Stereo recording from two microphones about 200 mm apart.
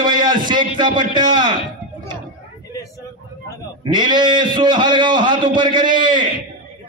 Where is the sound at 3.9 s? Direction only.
20° right (ahead or behind).